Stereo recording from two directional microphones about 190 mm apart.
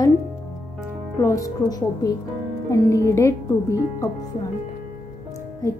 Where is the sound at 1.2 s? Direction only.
15° left (ahead or behind).